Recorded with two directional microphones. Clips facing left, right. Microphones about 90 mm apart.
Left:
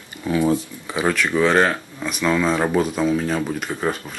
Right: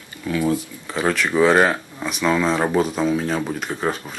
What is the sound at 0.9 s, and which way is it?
Speech, centre (ahead or behind).